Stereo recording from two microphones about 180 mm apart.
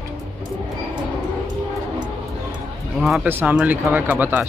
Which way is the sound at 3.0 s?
5° right (ahead or behind).